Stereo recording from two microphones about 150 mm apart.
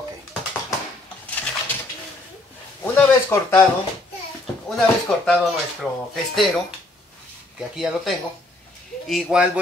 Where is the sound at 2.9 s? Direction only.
15° left (ahead or behind).